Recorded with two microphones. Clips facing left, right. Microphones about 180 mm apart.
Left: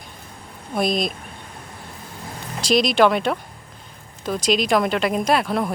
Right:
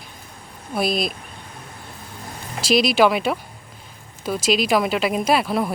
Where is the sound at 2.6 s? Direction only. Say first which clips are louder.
Even; 5° right (ahead or behind).